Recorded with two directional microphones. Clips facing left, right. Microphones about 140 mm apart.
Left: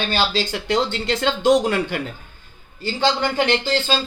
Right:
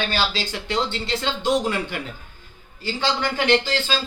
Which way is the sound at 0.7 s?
50° left (ahead or behind).